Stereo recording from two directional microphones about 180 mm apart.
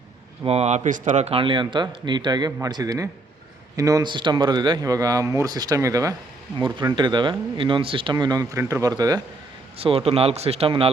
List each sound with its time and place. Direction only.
0.4 s speech: 35° right (ahead or behind); by 9.2 s 20° right (ahead or behind)
9.7 s speech: 30° right (ahead or behind)